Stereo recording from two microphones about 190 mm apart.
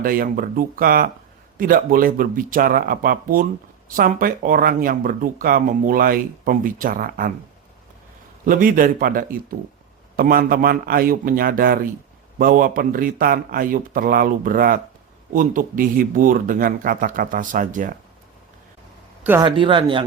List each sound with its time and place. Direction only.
0.0 s speech: 50° right (ahead or behind)
8.4 s speech: 45° right (ahead or behind)
19.4 s speech: 25° right (ahead or behind)